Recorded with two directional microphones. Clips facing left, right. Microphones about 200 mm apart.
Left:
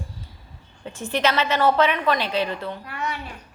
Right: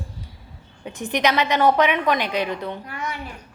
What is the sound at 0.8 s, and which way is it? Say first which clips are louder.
A woman's voice: right 1 dB; 15° right (ahead or behind).